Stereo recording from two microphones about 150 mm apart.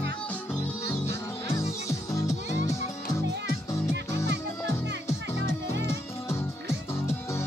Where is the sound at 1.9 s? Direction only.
20° left (ahead or behind).